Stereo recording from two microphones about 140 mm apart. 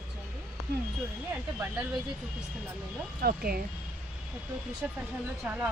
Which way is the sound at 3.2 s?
90° right.